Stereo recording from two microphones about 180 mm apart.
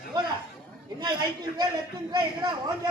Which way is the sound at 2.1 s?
25° right (ahead or behind).